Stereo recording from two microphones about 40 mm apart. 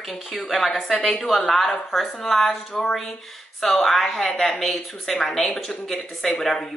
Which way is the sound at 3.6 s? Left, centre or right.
Centre.